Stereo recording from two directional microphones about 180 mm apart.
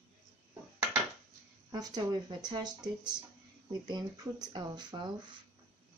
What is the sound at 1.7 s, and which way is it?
Speech, 20° right (ahead or behind).